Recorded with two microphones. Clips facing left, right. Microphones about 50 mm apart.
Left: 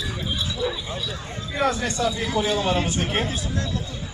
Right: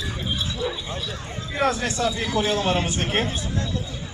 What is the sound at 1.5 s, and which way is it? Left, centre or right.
Speech, centre.